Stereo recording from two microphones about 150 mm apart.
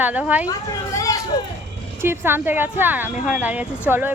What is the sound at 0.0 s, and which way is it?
Speech, 10° right (ahead or behind).